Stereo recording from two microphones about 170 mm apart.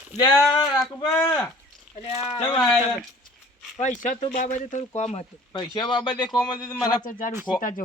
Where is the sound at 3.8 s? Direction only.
50° left (ahead or behind).